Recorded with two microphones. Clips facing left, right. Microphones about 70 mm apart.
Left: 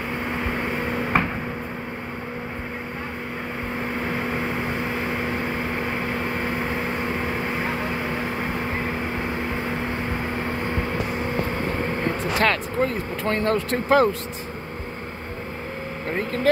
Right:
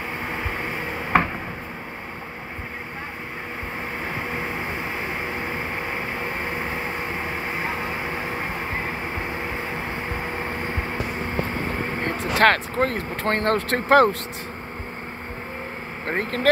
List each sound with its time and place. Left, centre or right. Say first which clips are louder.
4.2 s vehicle: left 2 dB; centre
12.0 s speech: right 4 dB; right
16.1 s speech: right 1 dB; right